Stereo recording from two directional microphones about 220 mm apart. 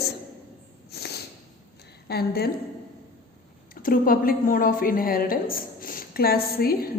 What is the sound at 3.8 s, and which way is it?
A woman's voice, 40° left (ahead or behind).